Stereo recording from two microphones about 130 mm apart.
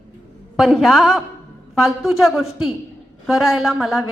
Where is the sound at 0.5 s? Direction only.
Centre (ahead or behind).